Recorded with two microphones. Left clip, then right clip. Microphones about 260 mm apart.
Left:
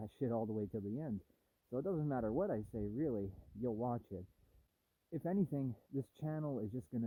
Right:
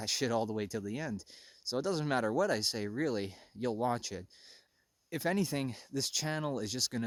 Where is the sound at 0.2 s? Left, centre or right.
Right.